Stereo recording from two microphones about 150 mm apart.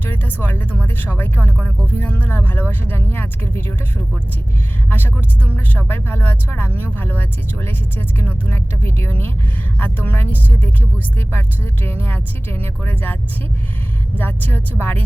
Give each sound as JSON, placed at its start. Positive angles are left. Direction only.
{"t": 0.0, "sound": "speech", "side_deg": 15}
{"t": 5.5, "sound": "speech", "side_deg": 15}
{"t": 14.2, "sound": "speech", "side_deg": 10}